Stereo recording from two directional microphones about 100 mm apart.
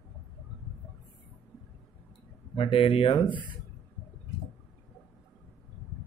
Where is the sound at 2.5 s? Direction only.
65° left (ahead or behind).